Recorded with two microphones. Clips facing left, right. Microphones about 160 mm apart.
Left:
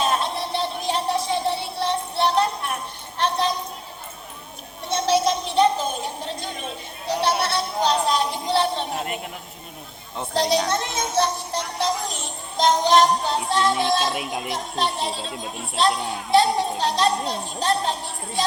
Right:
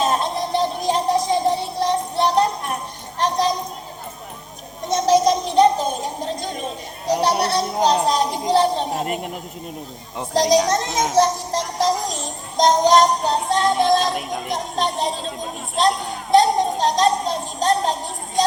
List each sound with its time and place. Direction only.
0.0 s music: 40° right (ahead or behind)
3.2 s a sound: 40° right (ahead or behind)
4.9 s a sound: 40° right (ahead or behind)
8.0 s music: 40° right (ahead or behind)
10.3 s a child's voice: 40° right (ahead or behind)
11.1 s music: 40° right (ahead or behind)
14.8 s chatter: 45° right (ahead or behind)